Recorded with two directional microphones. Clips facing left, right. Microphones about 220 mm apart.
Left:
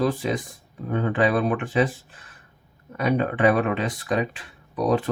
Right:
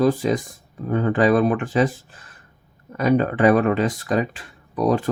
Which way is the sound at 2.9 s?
40° right (ahead or behind).